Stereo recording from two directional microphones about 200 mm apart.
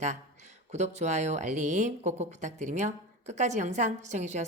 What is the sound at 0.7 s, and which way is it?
Speech, 35° right (ahead or behind).